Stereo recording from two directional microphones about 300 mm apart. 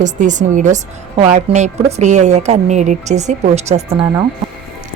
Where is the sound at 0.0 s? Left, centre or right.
Right.